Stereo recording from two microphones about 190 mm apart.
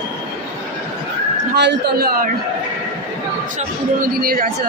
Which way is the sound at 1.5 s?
65° right (ahead or behind).